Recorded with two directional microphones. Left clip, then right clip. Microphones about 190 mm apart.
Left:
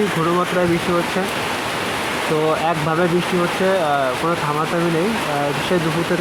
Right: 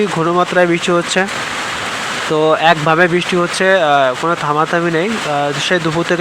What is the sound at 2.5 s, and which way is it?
Speech, 20° right (ahead or behind).